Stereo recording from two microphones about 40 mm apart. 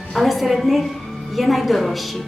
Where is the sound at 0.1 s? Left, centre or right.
Centre.